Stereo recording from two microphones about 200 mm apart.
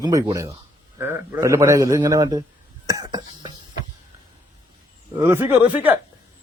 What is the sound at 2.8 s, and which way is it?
Cough, 20° right (ahead or behind).